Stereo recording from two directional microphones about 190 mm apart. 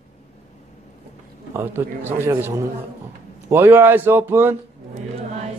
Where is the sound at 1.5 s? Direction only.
10° right (ahead or behind).